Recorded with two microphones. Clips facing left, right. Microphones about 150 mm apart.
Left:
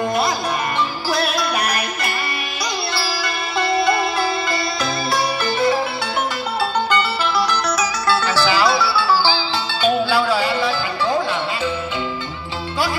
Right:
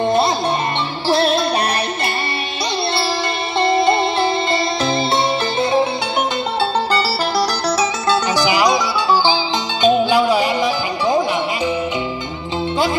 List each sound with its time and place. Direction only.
0.0 s music: 25° right (ahead or behind)
3.5 s music: 25° right (ahead or behind)
6.9 s music: 35° right (ahead or behind)
8.1 s music: 15° right (ahead or behind)